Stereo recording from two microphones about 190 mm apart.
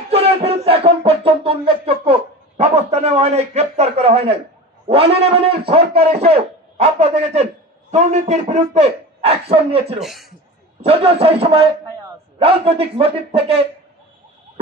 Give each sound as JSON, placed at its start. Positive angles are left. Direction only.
{"t": 0.1, "sound": "a sound", "side_deg": -30}
{"t": 4.8, "sound": "a man's voice", "side_deg": -30}
{"t": 9.9, "sound": "speech", "side_deg": 0}
{"t": 10.8, "sound": "a man's voice", "side_deg": -30}